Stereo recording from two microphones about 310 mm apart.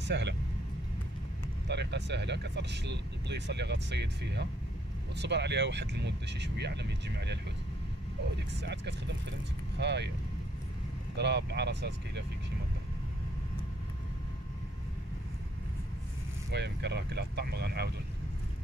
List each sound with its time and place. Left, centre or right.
0.0 s speech: right
1.7 s speech: right
8.5 s speech: right
11.1 s speech: right
16.5 s speech: right